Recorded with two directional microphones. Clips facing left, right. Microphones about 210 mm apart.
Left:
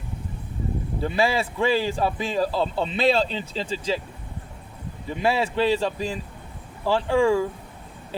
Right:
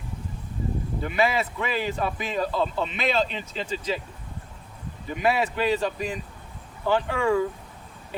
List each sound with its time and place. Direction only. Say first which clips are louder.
1.0 s a man's voice: left 2 dB; 30° left (ahead or behind)
5.0 s speech: left 1 dB; 30° left (ahead or behind)